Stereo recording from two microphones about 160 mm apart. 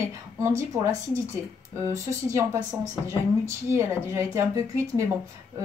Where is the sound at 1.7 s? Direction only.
20° right (ahead or behind).